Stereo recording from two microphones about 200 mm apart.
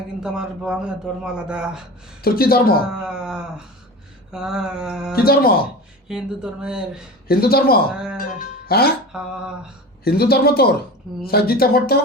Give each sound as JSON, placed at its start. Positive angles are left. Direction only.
{"t": 0.2, "sound": "a man's voice", "side_deg": -5}
{"t": 2.2, "sound": "speech", "side_deg": 50}
{"t": 3.0, "sound": "a man's voice", "side_deg": -5}
{"t": 5.1, "sound": "speech", "side_deg": 50}
{"t": 6.1, "sound": "a man's voice", "side_deg": -5}
{"t": 7.3, "sound": "speech", "side_deg": 50}
{"t": 9.1, "sound": "a man's voice", "side_deg": -5}
{"t": 10.0, "sound": "speech", "side_deg": 50}